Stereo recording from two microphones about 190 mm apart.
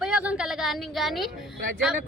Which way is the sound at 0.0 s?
5° right (ahead or behind).